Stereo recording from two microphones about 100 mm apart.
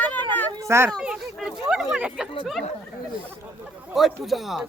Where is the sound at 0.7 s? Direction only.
25° right (ahead or behind).